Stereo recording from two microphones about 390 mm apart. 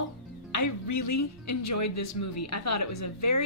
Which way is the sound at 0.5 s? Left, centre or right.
Left.